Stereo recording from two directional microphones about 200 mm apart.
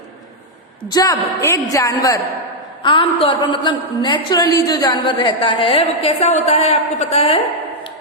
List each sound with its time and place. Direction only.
0.9 s a woman's voice: 20° left (ahead or behind)